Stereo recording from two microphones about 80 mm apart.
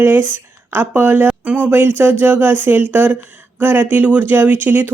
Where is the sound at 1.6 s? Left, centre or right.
Right.